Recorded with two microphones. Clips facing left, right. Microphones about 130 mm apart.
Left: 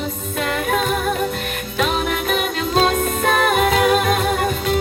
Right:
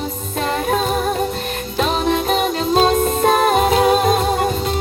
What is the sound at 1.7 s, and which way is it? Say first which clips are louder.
Music: right 3 dB; 30° right (ahead or behind).